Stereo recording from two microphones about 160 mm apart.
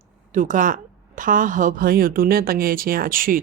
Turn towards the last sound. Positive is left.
turn(degrees=-60)  # may be behind; listen again after turning